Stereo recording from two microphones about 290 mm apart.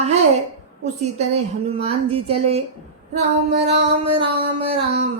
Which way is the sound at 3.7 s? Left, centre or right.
Right.